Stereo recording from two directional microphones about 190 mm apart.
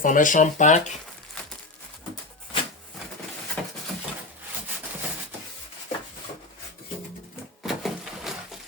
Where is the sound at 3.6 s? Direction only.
Centre (ahead or behind).